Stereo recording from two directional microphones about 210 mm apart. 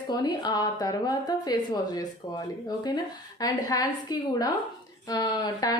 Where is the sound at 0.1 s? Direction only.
20° left (ahead or behind).